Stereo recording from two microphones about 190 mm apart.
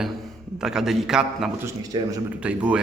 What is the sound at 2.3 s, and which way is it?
Speech, 5° right (ahead or behind).